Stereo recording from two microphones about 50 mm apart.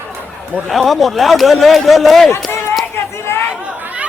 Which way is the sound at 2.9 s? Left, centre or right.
Left.